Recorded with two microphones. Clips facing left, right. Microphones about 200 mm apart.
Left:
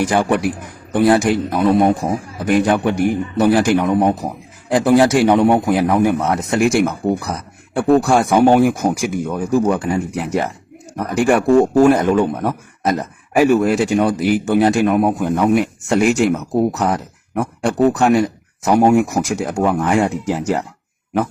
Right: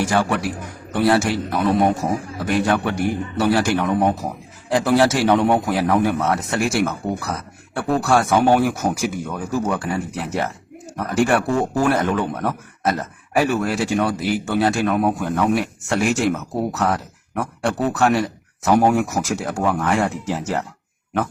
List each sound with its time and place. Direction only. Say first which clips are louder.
0.0 s a man's voice: left 4 dB; 15° left (ahead or behind)
11.8 s a man's voice: left 7 dB; 15° left (ahead or behind)